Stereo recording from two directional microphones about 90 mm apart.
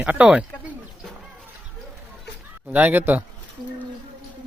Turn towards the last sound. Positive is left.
turn(degrees=0)  # may be behind; listen again after turning